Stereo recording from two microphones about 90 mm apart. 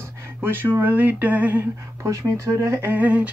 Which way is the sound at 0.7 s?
20° right (ahead or behind).